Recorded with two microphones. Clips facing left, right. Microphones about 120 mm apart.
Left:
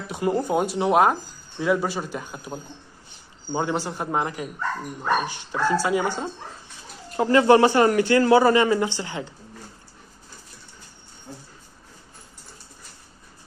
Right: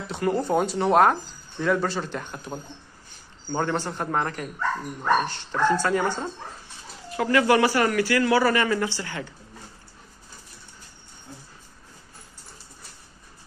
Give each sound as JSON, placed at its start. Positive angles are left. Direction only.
{"t": 0.1, "sound": "a man's voice", "side_deg": 15}
{"t": 7.2, "sound": "a man's voice", "side_deg": 25}